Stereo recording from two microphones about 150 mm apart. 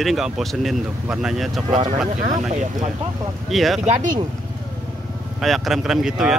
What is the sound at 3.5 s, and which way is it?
Speech, centre (ahead or behind).